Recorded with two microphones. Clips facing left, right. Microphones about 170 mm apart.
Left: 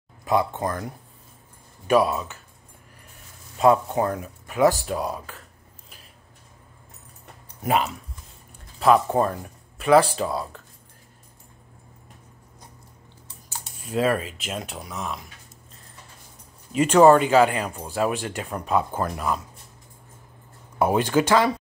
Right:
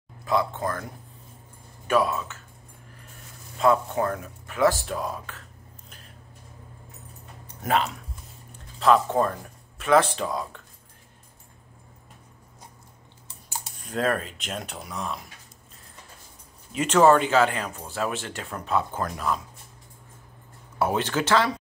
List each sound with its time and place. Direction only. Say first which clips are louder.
0.3 s speech: left 2 dB; 15° left (ahead or behind)
1.9 s speech: left 3 dB; 15° left (ahead or behind)
3.6 s speech: left 3 dB; 15° left (ahead or behind)
7.6 s speech: left 2 dB; 10° left (ahead or behind)
13.8 s speech: left 3 dB; 5° left (ahead or behind)
16.7 s speech: left 4 dB; 10° left (ahead or behind)
20.8 s speech: left 5 dB; 10° left (ahead or behind)